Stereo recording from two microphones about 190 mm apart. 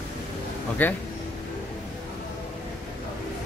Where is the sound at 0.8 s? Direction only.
10° left (ahead or behind).